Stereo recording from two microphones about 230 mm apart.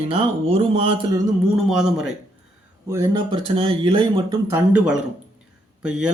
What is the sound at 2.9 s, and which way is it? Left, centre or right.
Speech, centre.